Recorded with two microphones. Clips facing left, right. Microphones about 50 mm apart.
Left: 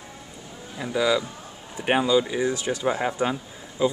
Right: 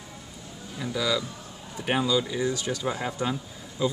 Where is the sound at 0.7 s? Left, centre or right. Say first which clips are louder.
Left 5 dB; left.